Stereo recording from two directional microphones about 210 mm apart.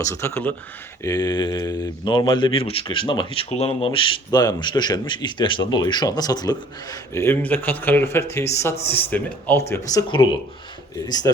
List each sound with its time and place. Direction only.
0.0 s speech: 15° left (ahead or behind)